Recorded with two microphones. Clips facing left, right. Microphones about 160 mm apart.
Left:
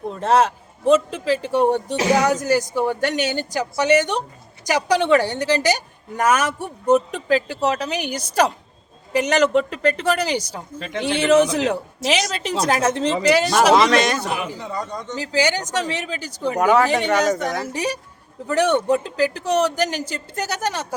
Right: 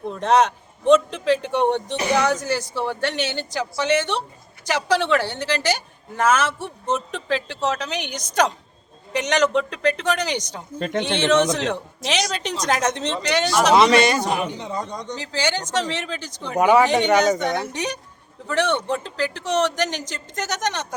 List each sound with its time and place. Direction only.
0.1 s a man's voice: 5° left (ahead or behind)
10.8 s speech: 45° right (ahead or behind)
11.0 s a woman's voice: 5° left (ahead or behind)
14.2 s speech: 40° right (ahead or behind)
14.6 s speech: 20° right (ahead or behind)
15.1 s a woman's voice: 10° left (ahead or behind)
16.6 s a man's voice: 5° right (ahead or behind)